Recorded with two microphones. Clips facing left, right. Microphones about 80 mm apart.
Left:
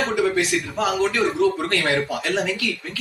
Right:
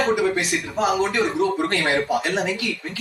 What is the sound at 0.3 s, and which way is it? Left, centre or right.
A man's voice, right.